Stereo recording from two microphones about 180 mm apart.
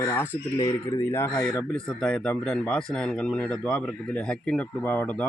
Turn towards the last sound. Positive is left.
turn(degrees=5)  # may be behind; listen again after turning